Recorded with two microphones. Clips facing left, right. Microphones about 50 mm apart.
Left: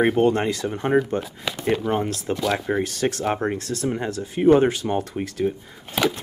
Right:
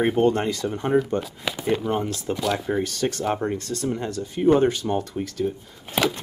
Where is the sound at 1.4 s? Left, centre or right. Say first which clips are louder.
Left 3 dB; centre.